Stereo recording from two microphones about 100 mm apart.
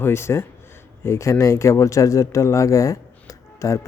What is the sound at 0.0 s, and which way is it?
Speech, 25° left (ahead or behind).